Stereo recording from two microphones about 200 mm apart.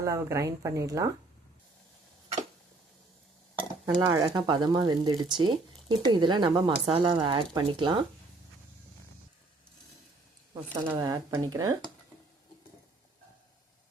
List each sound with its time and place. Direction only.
0.0 s speech: 15° right (ahead or behind)
3.8 s speech: 15° right (ahead or behind)
10.5 s speech: 20° right (ahead or behind)